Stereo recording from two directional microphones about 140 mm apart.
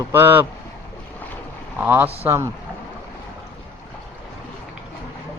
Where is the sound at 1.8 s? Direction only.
15° right (ahead or behind).